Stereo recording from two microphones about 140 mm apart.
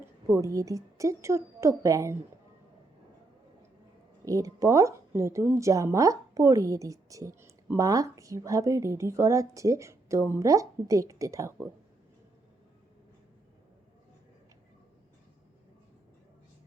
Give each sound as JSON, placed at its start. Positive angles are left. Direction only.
{"t": 0.0, "sound": "a woman's voice", "side_deg": -20}
{"t": 4.3, "sound": "speech", "side_deg": -25}